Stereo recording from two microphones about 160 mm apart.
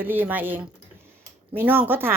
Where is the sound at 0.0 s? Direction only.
10° right (ahead or behind).